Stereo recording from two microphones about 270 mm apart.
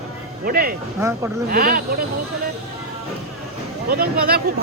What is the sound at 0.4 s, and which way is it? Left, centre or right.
Speech, right.